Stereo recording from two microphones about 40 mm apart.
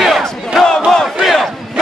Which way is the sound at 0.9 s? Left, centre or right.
Centre.